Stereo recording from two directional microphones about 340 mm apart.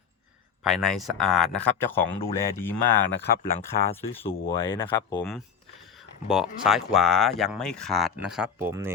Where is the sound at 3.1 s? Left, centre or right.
Left.